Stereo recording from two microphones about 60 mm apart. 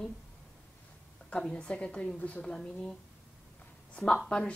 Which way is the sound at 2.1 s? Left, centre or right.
Left.